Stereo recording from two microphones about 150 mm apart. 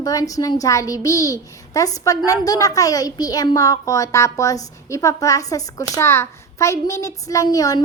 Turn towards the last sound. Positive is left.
turn(degrees=25)  # may be behind; listen again after turning